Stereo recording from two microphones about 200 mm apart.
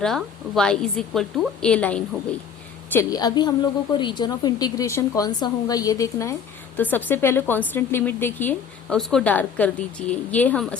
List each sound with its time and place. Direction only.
0.0 s a woman's voice: centre (ahead or behind)